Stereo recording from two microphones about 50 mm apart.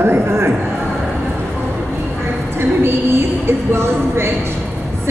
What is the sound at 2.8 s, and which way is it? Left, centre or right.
A woman's voice, right.